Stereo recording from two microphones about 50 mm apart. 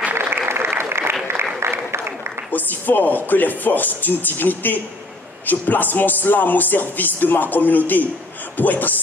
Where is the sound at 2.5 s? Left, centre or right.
Left.